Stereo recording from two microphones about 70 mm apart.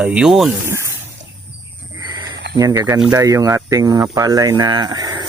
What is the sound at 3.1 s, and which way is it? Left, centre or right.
Speech, right.